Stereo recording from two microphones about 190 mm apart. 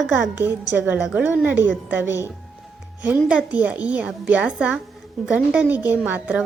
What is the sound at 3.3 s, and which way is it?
Speech, 5° right (ahead or behind).